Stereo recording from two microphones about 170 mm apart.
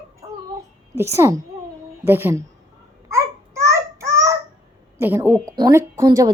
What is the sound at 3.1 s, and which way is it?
Babbling, 15° right (ahead or behind).